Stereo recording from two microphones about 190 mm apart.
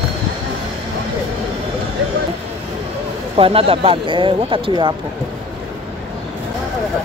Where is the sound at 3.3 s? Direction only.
30° right (ahead or behind).